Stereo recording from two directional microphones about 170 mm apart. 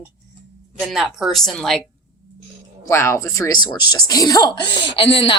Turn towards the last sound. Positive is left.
turn(degrees=30)  # may be behind; listen again after turning